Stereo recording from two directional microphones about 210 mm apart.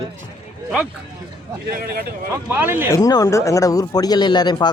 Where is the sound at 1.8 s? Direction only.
45° right (ahead or behind).